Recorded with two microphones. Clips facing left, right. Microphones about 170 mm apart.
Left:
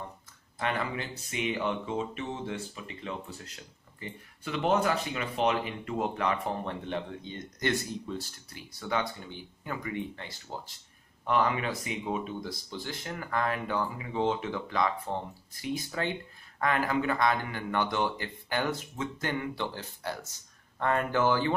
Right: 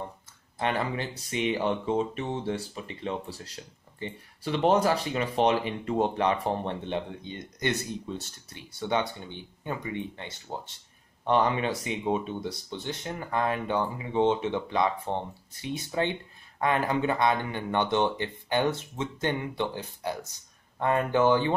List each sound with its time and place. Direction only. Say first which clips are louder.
0.6 s speech: right 3 dB; 30° right (ahead or behind)
8.5 s speech: right 4 dB; 25° right (ahead or behind)